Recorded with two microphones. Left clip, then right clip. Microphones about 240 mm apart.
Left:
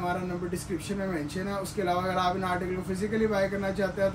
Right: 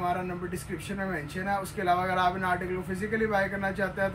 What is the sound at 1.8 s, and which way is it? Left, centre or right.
Speech, centre.